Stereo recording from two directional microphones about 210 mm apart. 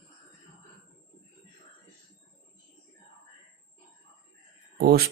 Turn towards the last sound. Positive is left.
turn(degrees=-45)  # may be behind; listen again after turning